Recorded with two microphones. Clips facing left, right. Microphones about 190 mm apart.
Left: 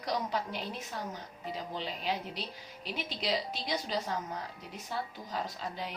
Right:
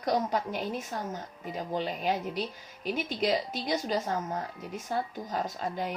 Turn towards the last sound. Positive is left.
turn(degrees=-50)  # may be behind; listen again after turning